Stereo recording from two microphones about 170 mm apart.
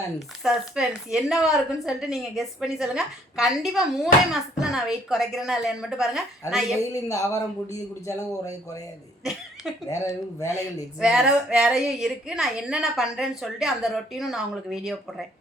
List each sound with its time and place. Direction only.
0.4 s a woman's voice: centre (ahead or behind)
6.8 s a man's voice: 20° left (ahead or behind)
9.9 s a man's voice: 20° left (ahead or behind)
11.0 s a woman's voice: 5° right (ahead or behind)